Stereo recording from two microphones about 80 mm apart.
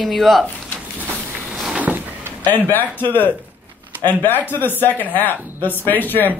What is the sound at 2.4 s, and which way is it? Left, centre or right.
Speech, left.